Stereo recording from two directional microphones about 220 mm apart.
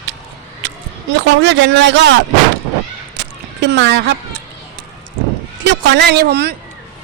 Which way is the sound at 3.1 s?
50° right (ahead or behind).